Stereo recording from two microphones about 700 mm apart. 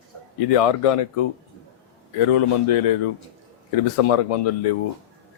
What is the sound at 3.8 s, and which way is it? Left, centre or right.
Speech, left.